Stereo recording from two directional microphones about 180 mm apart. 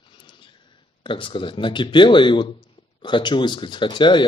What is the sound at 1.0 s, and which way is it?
Speech, 30° left (ahead or behind).